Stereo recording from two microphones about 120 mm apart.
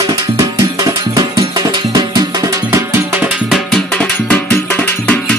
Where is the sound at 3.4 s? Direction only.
Centre (ahead or behind).